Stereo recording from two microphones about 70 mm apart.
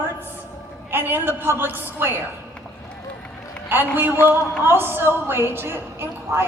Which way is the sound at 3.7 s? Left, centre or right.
Right.